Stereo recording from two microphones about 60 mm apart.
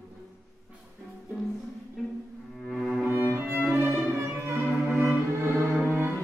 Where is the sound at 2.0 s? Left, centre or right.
Centre.